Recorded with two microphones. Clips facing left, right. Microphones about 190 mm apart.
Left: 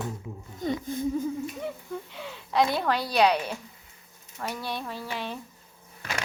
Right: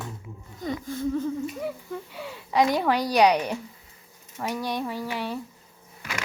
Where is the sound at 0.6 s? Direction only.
20° left (ahead or behind).